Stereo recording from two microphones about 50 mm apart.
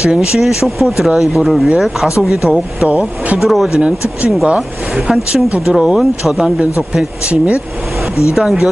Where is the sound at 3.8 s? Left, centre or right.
Right.